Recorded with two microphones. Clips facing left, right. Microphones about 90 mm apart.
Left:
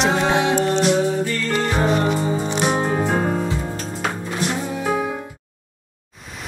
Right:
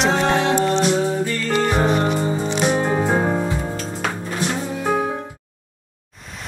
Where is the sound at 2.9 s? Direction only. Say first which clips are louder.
Right 1 dB; 20° right (ahead or behind).